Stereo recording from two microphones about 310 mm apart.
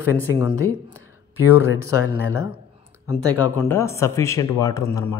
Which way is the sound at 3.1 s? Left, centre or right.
Centre.